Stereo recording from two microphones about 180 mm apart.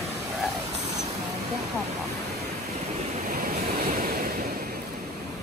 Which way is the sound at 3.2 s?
55° right (ahead or behind).